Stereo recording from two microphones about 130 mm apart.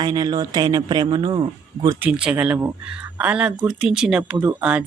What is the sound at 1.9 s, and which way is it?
Speech, 10° right (ahead or behind).